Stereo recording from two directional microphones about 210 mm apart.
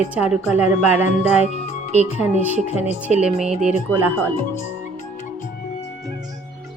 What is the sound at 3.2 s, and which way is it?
Speech, 5° right (ahead or behind).